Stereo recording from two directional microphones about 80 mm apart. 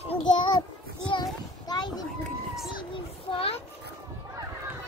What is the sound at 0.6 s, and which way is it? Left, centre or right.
Child singing, left.